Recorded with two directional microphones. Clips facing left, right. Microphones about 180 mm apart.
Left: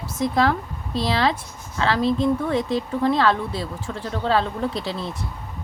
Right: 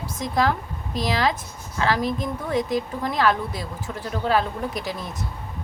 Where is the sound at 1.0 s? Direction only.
15° right (ahead or behind).